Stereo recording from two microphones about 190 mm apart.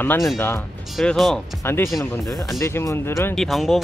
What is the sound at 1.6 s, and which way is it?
Speech, 10° left (ahead or behind).